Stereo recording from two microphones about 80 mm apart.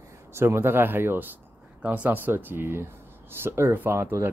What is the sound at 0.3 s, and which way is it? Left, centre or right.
Speech, right.